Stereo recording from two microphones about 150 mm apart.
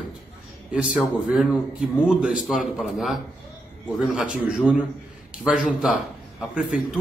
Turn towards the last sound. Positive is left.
turn(degrees=-5)  # may be behind; listen again after turning